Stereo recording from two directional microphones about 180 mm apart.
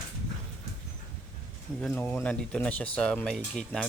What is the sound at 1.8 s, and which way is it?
Speech, 10° left (ahead or behind).